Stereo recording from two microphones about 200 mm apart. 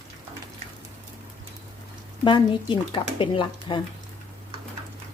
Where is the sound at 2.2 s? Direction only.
25° left (ahead or behind).